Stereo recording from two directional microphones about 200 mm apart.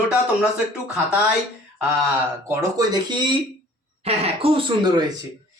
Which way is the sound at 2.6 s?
20° right (ahead or behind).